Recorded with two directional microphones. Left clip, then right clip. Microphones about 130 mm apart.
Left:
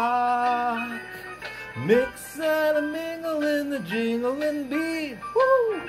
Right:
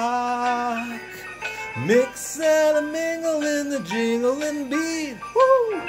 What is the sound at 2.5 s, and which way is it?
Music, 30° right (ahead or behind).